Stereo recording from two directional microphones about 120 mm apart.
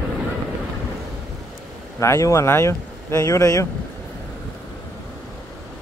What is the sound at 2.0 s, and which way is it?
Speech, 25° left (ahead or behind).